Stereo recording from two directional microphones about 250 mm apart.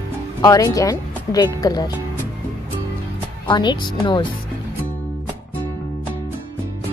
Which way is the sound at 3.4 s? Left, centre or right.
Centre.